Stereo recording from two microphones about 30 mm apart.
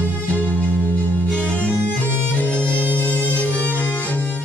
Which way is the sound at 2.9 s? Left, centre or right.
Left.